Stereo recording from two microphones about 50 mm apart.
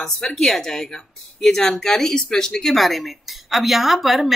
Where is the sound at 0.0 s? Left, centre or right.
Centre.